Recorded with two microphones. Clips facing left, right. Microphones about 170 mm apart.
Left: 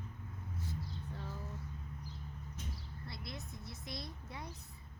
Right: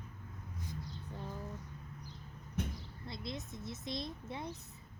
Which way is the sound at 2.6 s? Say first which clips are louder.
Right 11 dB; 60° right (ahead or behind).